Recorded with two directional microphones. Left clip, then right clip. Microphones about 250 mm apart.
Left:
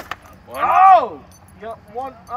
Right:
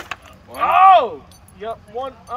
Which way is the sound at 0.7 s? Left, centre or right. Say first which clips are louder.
Even; centre.